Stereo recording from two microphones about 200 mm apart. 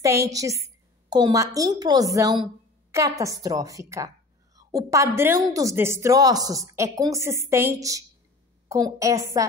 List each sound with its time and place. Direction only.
0.0 s a woman's voice: 15° right (ahead or behind)